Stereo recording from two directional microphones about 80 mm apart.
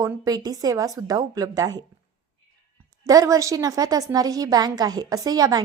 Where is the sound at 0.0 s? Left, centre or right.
Right.